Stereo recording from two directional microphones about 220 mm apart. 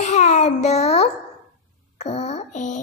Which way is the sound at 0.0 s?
30° left (ahead or behind).